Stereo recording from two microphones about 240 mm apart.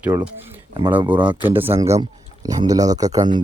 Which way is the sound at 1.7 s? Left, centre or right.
Centre.